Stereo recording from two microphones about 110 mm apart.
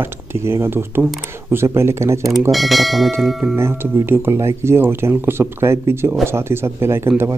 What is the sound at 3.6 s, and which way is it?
Speech, 20° right (ahead or behind).